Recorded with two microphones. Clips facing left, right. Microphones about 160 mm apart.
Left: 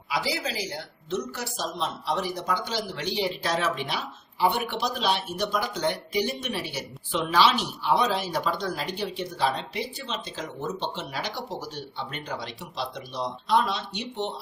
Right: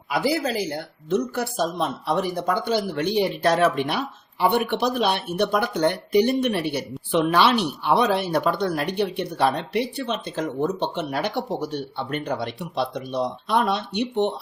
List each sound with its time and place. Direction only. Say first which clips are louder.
0.1 s speech: right 7 dB; 55° right (ahead or behind)